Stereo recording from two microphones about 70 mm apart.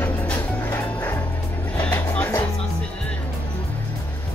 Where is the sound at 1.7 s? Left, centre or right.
Left.